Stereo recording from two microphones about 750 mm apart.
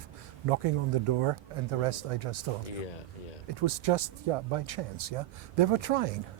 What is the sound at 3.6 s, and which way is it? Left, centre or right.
Speech, right.